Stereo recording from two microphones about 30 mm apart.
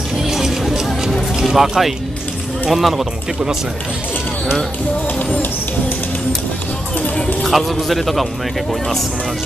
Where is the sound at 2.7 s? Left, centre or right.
Centre.